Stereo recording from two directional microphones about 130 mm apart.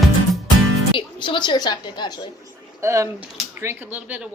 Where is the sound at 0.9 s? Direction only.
40° left (ahead or behind).